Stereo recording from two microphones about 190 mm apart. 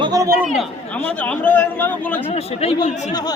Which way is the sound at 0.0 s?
20° right (ahead or behind).